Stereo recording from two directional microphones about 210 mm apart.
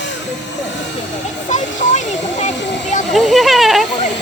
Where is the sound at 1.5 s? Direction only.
35° left (ahead or behind).